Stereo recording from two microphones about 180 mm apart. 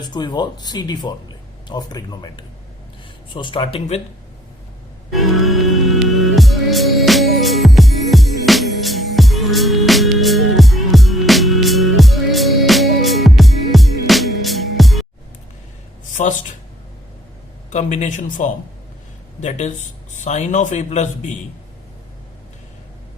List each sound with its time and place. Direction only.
0.1 s speech: 25° left (ahead or behind)
5.1 s music: centre (ahead or behind)
17.7 s speech: 40° left (ahead or behind)